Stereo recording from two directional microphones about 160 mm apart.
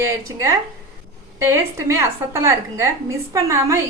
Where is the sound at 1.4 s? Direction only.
15° right (ahead or behind).